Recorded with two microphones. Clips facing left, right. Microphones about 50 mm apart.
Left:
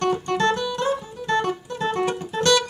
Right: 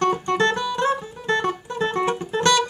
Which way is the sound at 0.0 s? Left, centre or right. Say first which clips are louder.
Right 1 dB; right.